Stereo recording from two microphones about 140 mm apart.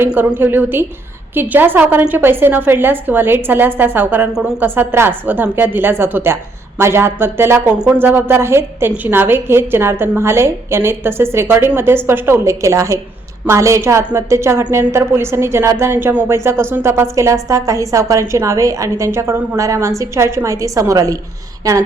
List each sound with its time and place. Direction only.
0.0 s a woman's voice: 10° right (ahead or behind)